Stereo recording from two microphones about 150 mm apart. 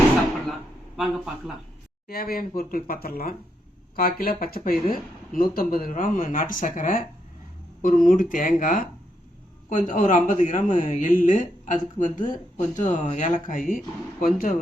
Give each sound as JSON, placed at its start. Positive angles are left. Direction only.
{"t": 0.9, "sound": "speech", "side_deg": 0}
{"t": 2.0, "sound": "speech", "side_deg": 85}